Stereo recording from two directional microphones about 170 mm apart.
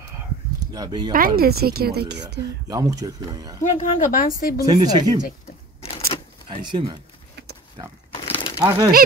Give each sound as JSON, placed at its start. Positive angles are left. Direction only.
{"t": 0.7, "sound": "speech", "side_deg": -25}
{"t": 1.1, "sound": "speech", "side_deg": -60}
{"t": 2.7, "sound": "speech", "side_deg": -20}
{"t": 3.6, "sound": "speech", "side_deg": 50}
{"t": 4.6, "sound": "speech", "side_deg": -25}
{"t": 5.8, "sound": "a sound", "side_deg": 35}
{"t": 6.7, "sound": "speech", "side_deg": -30}
{"t": 8.6, "sound": "speech", "side_deg": -25}